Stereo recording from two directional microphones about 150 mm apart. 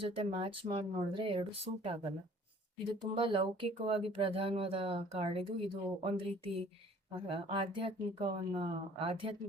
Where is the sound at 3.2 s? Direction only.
35° right (ahead or behind).